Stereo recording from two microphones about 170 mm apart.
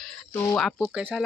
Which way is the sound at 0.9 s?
10° right (ahead or behind).